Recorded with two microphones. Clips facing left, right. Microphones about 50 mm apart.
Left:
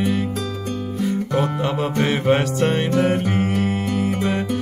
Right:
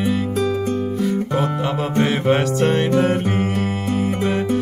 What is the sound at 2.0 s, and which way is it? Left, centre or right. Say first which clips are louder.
Music: right 1 dB; centre.